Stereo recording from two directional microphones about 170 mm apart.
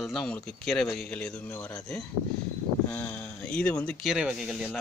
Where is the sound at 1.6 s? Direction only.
20° left (ahead or behind).